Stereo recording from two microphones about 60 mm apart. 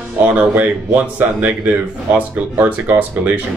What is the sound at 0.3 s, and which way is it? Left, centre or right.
Speech, right.